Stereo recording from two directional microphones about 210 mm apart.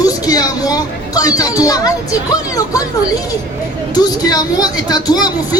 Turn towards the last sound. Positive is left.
turn(degrees=20)  # may be behind; listen again after turning